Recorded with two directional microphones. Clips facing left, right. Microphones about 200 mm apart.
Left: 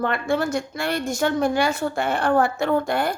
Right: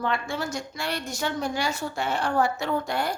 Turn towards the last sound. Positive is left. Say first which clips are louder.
# left 5 dB
turn(degrees=55)  # may be behind; listen again after turning